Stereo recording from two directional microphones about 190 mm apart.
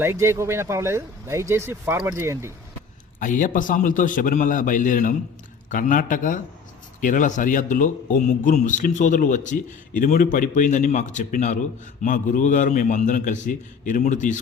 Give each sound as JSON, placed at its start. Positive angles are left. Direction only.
{"t": 0.0, "sound": "speech", "side_deg": -15}
{"t": 3.2, "sound": "a man's voice", "side_deg": 45}